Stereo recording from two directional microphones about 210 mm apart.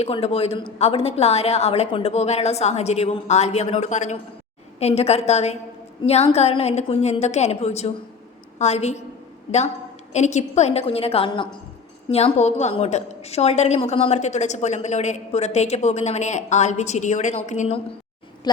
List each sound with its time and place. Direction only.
0.0 s a woman's voice: 30° left (ahead or behind)
10.1 s a woman's voice: 35° left (ahead or behind)